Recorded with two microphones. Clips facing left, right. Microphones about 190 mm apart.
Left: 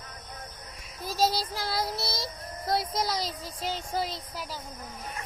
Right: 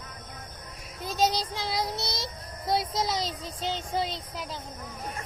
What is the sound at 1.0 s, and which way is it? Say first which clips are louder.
Speech: right 1 dB; 20° right (ahead or behind).